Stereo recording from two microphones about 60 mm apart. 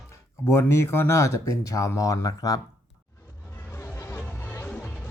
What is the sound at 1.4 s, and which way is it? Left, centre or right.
Speech, left.